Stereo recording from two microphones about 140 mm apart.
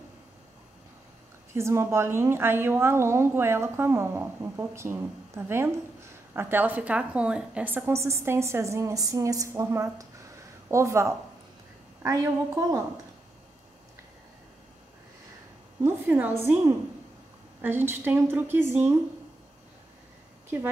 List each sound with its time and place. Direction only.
1.5 s a woman's voice: 20° right (ahead or behind)
15.8 s a woman's voice: 10° right (ahead or behind)
17.6 s a woman's voice: 15° right (ahead or behind)